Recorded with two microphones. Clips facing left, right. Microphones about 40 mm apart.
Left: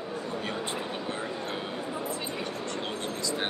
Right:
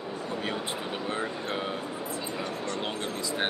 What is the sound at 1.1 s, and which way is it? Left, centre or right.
Speech, right.